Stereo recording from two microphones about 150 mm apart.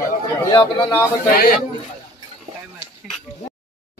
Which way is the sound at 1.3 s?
80° left.